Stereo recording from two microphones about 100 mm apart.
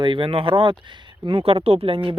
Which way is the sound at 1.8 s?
60° right (ahead or behind).